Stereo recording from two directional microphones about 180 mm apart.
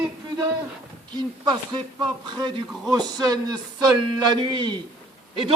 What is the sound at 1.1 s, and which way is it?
Speech, 25° right (ahead or behind).